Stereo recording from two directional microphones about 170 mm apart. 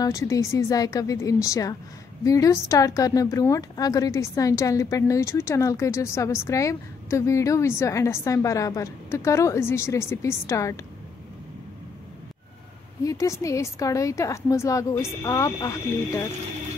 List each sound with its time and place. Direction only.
0.0 s a woman's voice: 20° left (ahead or behind)
13.0 s a woman's voice: 20° left (ahead or behind)